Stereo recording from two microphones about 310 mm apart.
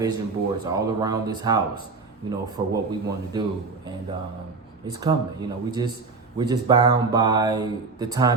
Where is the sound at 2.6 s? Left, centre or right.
Centre.